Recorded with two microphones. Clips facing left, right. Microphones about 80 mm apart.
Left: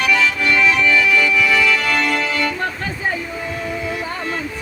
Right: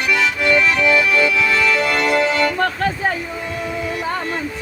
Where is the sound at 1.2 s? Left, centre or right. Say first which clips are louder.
Even; right.